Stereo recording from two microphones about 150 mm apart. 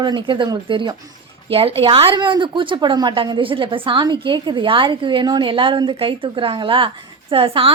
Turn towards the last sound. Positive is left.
turn(degrees=-35)  # may be behind; listen again after turning